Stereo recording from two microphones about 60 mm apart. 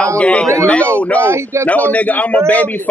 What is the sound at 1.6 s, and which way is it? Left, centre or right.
Speech, left.